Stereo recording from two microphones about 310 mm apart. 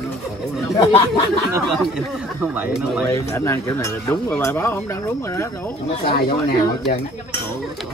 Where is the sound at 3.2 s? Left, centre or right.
Centre.